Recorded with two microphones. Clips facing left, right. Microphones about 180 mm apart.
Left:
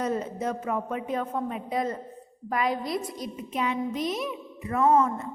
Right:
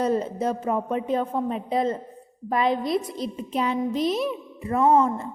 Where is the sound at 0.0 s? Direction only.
30° right (ahead or behind).